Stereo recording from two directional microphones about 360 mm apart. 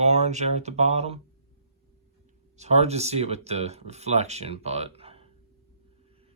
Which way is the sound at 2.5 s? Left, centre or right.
Centre.